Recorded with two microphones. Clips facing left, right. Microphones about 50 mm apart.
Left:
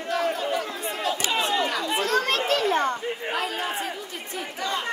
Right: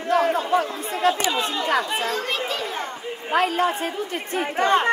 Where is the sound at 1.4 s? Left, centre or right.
Left.